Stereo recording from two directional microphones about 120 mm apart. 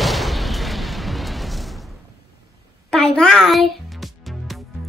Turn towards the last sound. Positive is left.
turn(degrees=0)  # may be behind; listen again after turning